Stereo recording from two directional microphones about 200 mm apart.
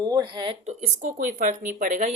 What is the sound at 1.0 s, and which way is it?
Speech, 40° right (ahead or behind).